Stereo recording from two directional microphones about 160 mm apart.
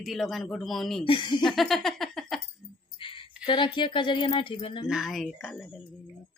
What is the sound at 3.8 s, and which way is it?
Speech, 30° left (ahead or behind).